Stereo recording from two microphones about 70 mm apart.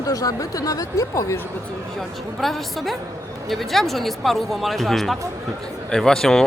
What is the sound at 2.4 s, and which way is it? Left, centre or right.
Speech, centre.